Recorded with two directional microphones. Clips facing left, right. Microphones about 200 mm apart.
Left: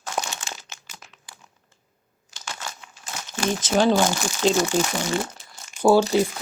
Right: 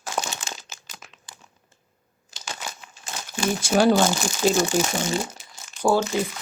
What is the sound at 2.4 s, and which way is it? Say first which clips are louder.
Crumpling: even; 20° right (ahead or behind).